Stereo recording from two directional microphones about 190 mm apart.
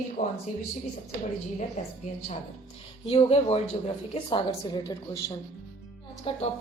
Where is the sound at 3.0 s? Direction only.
30° left (ahead or behind).